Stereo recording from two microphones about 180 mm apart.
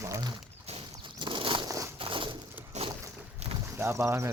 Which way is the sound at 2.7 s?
40° right (ahead or behind).